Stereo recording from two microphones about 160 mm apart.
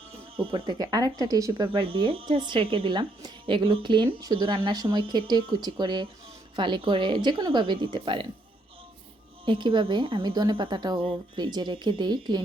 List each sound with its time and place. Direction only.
0.3 s a woman's voice: 35° right (ahead or behind)
9.5 s a woman's voice: 30° right (ahead or behind)